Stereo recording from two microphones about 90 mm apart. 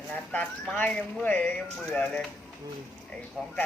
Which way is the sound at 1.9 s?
10° left (ahead or behind).